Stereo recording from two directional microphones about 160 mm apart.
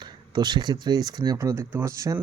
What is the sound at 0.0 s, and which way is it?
Speech, 25° right (ahead or behind).